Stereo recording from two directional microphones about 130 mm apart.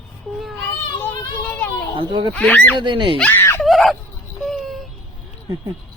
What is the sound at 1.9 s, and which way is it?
Speech, 40° right (ahead or behind).